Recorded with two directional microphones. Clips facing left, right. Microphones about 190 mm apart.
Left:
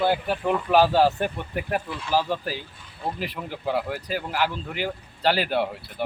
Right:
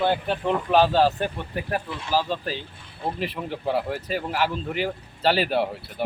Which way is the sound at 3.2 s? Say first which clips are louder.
Right 2 dB; centre (ahead or behind).